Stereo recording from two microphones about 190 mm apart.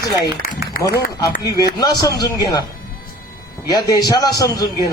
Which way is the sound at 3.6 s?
20° left (ahead or behind).